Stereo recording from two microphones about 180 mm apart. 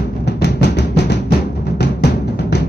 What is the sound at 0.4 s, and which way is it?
Music, 70° left (ahead or behind).